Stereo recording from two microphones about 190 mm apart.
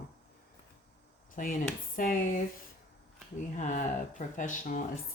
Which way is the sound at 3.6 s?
40° left (ahead or behind).